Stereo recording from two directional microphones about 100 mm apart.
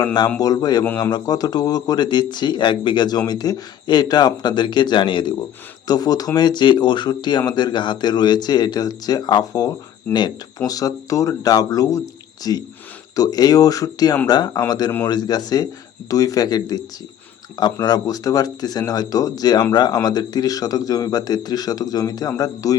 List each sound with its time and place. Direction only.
0.0 s speech: 45° left (ahead or behind)
5.9 s speech: 40° left (ahead or behind)